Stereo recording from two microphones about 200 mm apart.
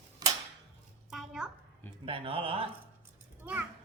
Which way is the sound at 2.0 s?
30° right (ahead or behind).